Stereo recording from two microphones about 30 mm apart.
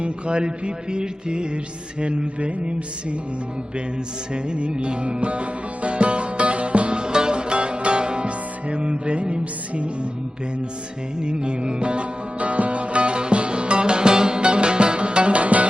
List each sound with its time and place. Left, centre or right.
0.0 s mantra: right
4.4 s music: right
11.2 s music: right